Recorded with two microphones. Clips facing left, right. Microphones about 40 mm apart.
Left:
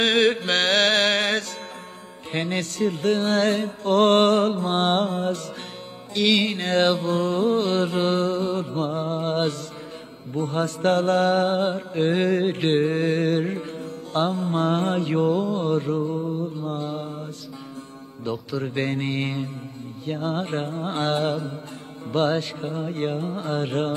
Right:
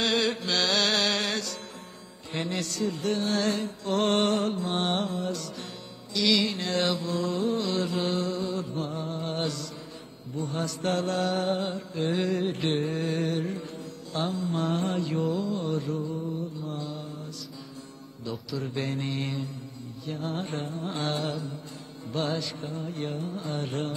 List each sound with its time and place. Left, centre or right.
0.0 s chant: left
2.3 s mantra: left
18.5 s mantra: left